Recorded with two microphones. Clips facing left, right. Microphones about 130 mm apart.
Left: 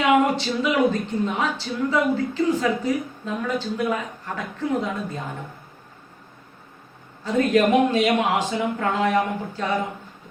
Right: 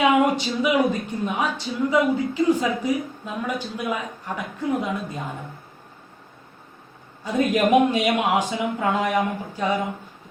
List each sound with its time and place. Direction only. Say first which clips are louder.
0.3 s speech: right 1 dB; 15° right (ahead or behind)
7.3 s speech: left 1 dB; 15° right (ahead or behind)